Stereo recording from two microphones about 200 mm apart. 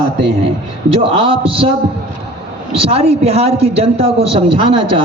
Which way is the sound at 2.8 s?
30° right (ahead or behind).